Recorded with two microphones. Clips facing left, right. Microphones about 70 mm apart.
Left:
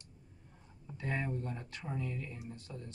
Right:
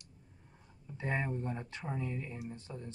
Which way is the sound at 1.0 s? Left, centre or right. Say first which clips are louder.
Right 2 dB; right.